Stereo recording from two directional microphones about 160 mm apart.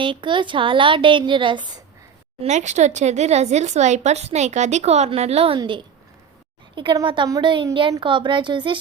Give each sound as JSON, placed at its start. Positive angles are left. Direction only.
{"t": 0.0, "sound": "a woman's voice", "side_deg": -30}
{"t": 2.4, "sound": "a woman's voice", "side_deg": -45}